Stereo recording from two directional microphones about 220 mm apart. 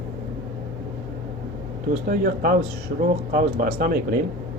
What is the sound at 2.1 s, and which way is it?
Speech, 40° right (ahead or behind).